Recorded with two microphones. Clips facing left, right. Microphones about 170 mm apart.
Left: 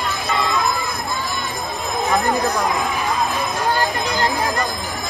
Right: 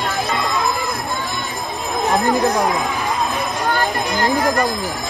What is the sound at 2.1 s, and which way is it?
Speech, 20° right (ahead or behind).